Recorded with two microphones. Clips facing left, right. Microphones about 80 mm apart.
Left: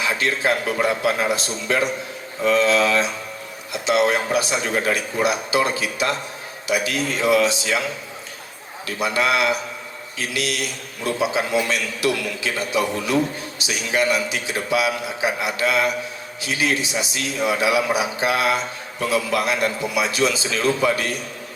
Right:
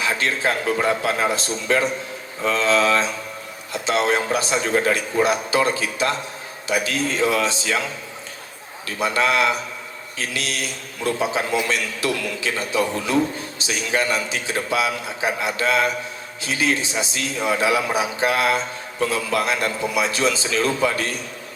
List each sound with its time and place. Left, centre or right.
0.0 s a man's voice: right
9.0 s a man's voice: right